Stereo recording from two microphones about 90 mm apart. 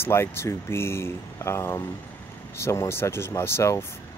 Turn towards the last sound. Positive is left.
turn(degrees=30)  # may be behind; listen again after turning